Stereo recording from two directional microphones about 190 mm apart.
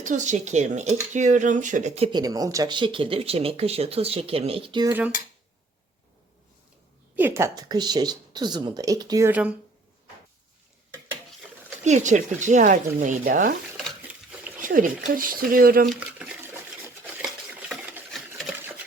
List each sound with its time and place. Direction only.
0.0 s speech: 40° right (ahead or behind)
2.0 s speech: 20° right (ahead or behind)
4.9 s cutlery: 10° right (ahead or behind)
7.2 s speech: 10° right (ahead or behind)
11.9 s speech: 40° right (ahead or behind)
14.6 s speech: 45° right (ahead or behind)
15.9 s a sound: 5° right (ahead or behind)
17.7 s sewing machine: 5° right (ahead or behind)